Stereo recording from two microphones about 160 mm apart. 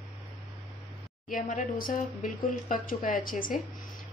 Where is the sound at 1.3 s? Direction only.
55° left (ahead or behind).